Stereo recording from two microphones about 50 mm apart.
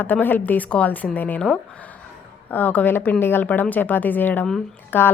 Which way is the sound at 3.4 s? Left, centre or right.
Left.